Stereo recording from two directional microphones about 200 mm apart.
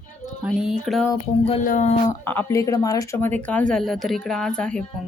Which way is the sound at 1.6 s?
40° left (ahead or behind).